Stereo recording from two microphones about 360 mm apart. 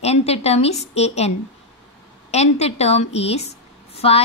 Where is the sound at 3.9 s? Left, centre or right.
Centre.